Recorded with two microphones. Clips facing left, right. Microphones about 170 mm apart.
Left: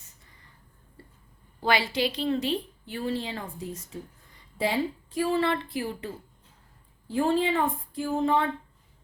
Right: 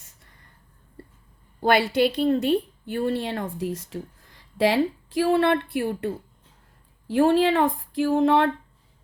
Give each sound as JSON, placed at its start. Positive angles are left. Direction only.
{"t": 1.6, "sound": "a woman's voice", "side_deg": -55}
{"t": 7.1, "sound": "speech", "side_deg": -70}